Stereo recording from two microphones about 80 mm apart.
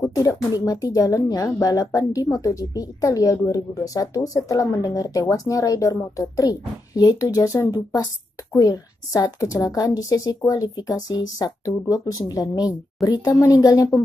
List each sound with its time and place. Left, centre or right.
0.0 s speech: left